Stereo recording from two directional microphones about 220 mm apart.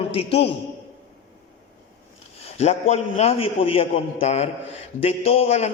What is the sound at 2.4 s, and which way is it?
A man's voice, 30° left (ahead or behind).